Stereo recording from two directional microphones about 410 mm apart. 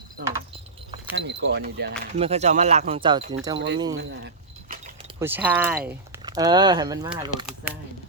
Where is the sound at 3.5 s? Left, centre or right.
Right.